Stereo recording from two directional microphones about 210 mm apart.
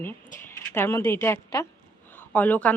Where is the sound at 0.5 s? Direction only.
10° left (ahead or behind).